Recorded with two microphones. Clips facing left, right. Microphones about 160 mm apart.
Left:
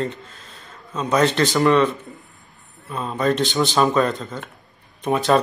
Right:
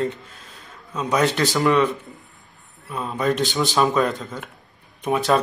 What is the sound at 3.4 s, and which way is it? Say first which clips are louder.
Speech: left 2 dB; 20° left (ahead or behind).